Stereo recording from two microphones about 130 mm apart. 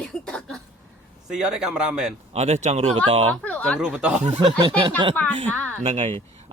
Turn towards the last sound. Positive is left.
turn(degrees=-50)  # may be behind; listen again after turning